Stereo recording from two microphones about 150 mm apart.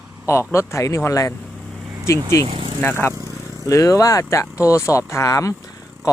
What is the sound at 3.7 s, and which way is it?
Speech, 20° left (ahead or behind).